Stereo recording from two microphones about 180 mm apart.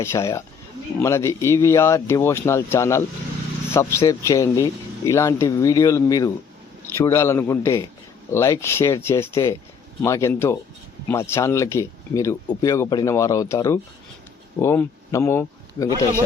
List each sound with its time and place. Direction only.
0.0 s speech: 15° left (ahead or behind)